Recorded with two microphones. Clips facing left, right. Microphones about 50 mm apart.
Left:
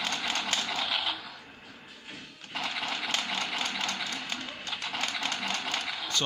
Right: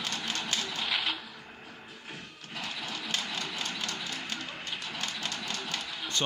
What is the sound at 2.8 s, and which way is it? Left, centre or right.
Engine, left.